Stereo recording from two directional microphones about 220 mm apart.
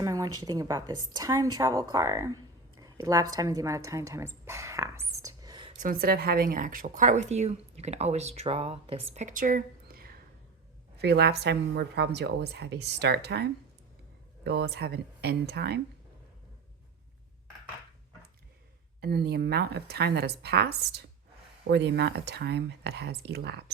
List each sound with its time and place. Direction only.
0.0 s a woman's voice: 15° right (ahead or behind)
5.2 s whispering: 15° right (ahead or behind)
5.8 s a woman's voice: 40° right (ahead or behind)
18.9 s a woman's voice: 45° right (ahead or behind)